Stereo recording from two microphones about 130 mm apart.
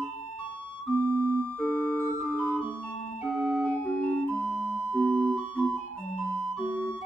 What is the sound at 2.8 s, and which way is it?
Music, centre (ahead or behind).